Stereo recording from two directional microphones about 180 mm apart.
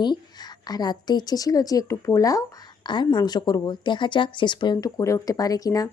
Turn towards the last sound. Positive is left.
turn(degrees=20)  # may be behind; listen again after turning